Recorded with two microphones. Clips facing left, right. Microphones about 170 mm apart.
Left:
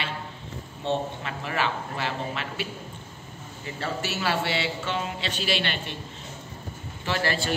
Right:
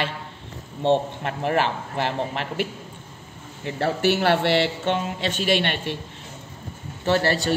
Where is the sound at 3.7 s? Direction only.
70° right (ahead or behind).